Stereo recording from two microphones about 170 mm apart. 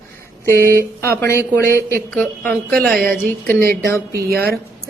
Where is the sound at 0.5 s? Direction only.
15° right (ahead or behind).